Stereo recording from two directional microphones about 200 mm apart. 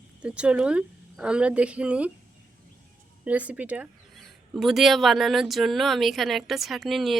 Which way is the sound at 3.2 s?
5° right (ahead or behind).